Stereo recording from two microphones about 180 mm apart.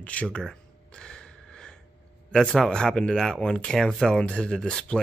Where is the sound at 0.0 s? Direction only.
5° left (ahead or behind).